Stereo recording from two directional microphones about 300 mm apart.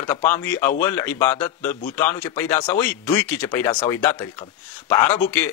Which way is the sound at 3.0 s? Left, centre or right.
Centre.